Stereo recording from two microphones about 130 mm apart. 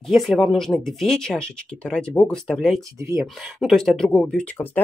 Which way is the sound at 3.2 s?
Centre (ahead or behind).